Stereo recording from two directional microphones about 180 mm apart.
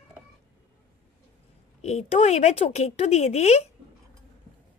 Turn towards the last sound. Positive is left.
turn(degrees=35)  # may be behind; listen again after turning